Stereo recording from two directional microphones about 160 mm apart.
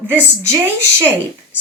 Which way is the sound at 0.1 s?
15° right (ahead or behind).